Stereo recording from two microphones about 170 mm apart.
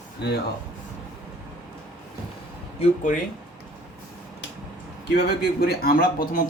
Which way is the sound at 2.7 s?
45° left (ahead or behind).